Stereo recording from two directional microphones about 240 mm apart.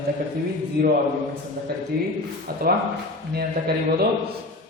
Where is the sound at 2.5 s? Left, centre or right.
Right.